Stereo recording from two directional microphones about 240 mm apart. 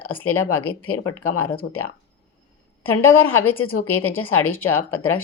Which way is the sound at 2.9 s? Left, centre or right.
Left.